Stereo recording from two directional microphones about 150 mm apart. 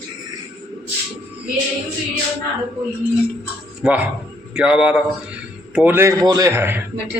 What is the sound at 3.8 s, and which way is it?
A man's voice, 10° right (ahead or behind).